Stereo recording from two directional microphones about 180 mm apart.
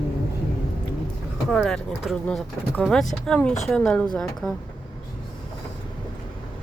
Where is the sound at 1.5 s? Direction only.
5° left (ahead or behind).